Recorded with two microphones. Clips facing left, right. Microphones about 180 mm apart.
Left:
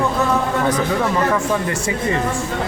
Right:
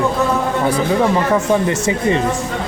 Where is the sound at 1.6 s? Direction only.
20° right (ahead or behind).